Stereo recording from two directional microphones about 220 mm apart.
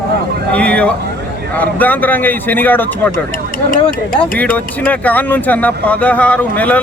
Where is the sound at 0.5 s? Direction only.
5° left (ahead or behind).